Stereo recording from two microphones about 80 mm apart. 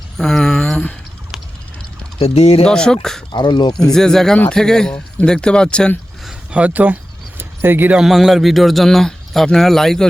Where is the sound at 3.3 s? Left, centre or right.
Left.